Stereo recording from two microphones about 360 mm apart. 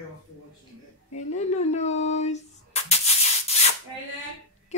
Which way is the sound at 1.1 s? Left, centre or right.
Centre.